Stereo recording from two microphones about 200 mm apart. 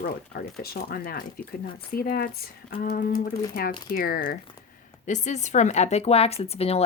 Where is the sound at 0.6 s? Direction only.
50° left (ahead or behind).